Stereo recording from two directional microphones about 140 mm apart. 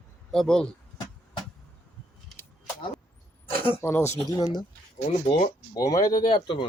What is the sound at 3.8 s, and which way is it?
Speech, 15° left (ahead or behind).